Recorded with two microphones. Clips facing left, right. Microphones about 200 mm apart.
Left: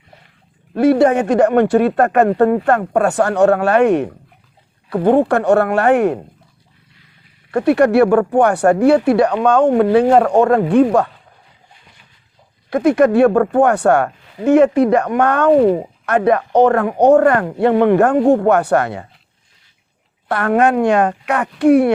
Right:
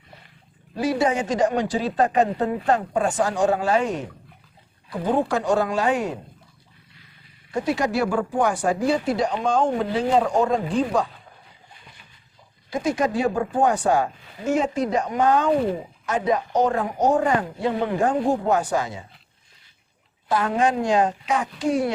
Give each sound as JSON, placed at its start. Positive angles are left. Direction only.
{"t": 0.7, "sound": "speech", "side_deg": 60}
{"t": 7.5, "sound": "speech", "side_deg": 60}
{"t": 12.7, "sound": "speech", "side_deg": 60}
{"t": 20.2, "sound": "speech", "side_deg": 65}